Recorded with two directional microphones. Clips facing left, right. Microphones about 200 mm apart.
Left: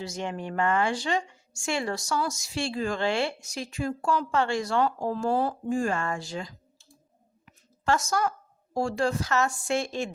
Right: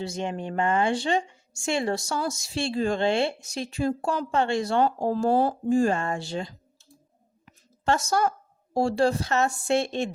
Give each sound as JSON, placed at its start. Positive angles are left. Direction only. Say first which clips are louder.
{"t": 0.1, "sound": "a woman's voice", "louder": "right 2 dB", "side_deg": -20}
{"t": 7.9, "sound": "a woman's voice", "louder": "right 2 dB", "side_deg": -30}